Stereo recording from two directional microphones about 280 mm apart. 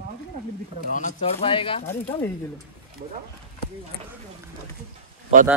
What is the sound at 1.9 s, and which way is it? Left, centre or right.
Speech, centre.